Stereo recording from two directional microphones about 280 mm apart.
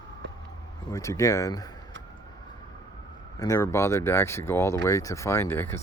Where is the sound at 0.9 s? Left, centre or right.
Centre.